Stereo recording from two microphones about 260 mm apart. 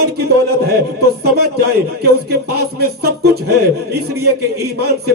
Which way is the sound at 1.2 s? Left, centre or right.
Right.